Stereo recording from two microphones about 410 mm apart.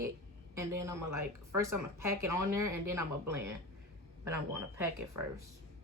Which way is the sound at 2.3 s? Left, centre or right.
Right.